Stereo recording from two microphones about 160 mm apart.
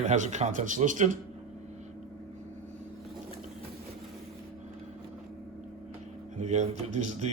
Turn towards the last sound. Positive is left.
turn(degrees=-45)  # may be behind; listen again after turning